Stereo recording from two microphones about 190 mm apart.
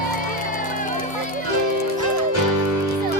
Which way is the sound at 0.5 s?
45° left (ahead or behind).